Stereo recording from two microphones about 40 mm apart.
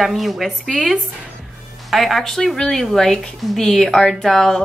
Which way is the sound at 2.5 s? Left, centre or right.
Centre.